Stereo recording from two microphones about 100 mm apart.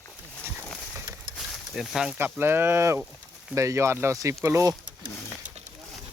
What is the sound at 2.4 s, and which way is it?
Speech, 25° right (ahead or behind).